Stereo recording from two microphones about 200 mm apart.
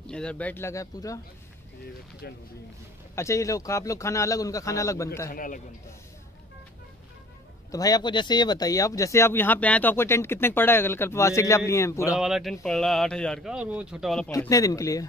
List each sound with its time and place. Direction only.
0.0 s speech: 5° left (ahead or behind)
2.2 s a man's voice: 50° left (ahead or behind)
3.2 s speech: 15° left (ahead or behind)
5.3 s a man's voice: 45° left (ahead or behind)
7.7 s speech: 20° left (ahead or behind)
12.2 s speech: centre (ahead or behind)
14.3 s speech: 15° left (ahead or behind)